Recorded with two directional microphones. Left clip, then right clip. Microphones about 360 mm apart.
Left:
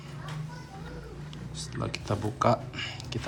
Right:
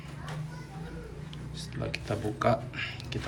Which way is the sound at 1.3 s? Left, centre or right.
Centre.